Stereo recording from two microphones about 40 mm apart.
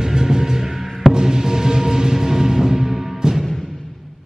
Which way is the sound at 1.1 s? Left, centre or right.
Centre.